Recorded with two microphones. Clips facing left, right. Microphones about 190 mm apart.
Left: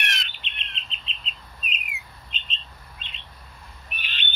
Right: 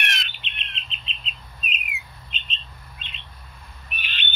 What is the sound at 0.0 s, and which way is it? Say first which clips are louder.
Bird: right 2 dB; 60° right (ahead or behind).